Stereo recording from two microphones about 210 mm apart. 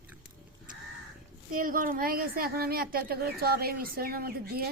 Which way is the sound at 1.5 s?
40° right (ahead or behind).